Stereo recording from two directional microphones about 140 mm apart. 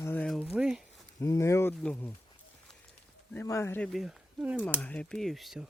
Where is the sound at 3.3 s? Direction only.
20° left (ahead or behind).